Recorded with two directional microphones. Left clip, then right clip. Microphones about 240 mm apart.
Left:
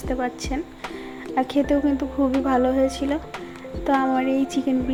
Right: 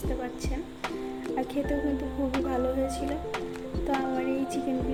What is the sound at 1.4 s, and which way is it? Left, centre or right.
Speech, centre.